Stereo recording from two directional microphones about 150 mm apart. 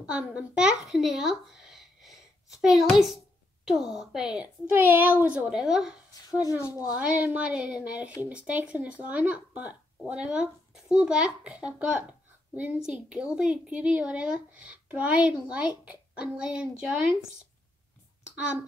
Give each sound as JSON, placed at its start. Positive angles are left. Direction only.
{"t": 0.0, "sound": "a child's voice", "side_deg": -5}
{"t": 6.4, "sound": "a woman's voice", "side_deg": 25}
{"t": 7.0, "sound": "speech", "side_deg": -10}
{"t": 18.3, "sound": "speech", "side_deg": -5}